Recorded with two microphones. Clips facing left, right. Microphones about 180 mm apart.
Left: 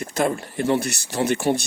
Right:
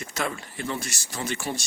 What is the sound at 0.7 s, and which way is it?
Speech, 60° left (ahead or behind).